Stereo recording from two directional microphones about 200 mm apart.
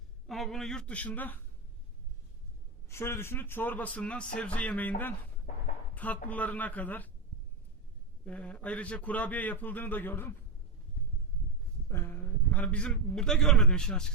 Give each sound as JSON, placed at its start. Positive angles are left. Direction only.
{"t": 0.3, "sound": "speech", "side_deg": 0}
{"t": 2.9, "sound": "a man's voice", "side_deg": 10}
{"t": 5.5, "sound": "a sound", "side_deg": 45}
{"t": 5.9, "sound": "a sound", "side_deg": 10}
{"t": 6.2, "sound": "a man's voice", "side_deg": 10}
{"t": 8.2, "sound": "a man's voice", "side_deg": 5}
{"t": 11.9, "sound": "a man's voice", "side_deg": 10}